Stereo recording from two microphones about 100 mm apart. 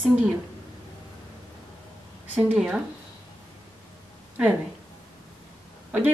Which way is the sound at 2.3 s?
10° right (ahead or behind).